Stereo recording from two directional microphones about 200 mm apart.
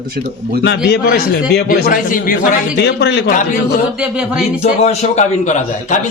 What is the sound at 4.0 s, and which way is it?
Speech, 5° right (ahead or behind).